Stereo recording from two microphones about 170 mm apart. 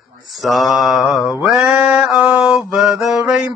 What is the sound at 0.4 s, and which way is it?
Mantra, centre (ahead or behind).